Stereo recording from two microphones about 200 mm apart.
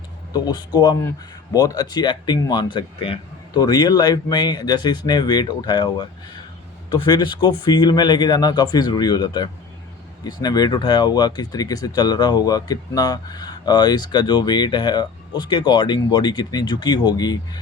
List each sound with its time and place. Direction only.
0.3 s speech: 20° left (ahead or behind)